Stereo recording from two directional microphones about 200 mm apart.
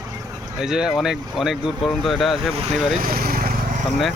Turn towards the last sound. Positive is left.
turn(degrees=-45)  # may be behind; listen again after turning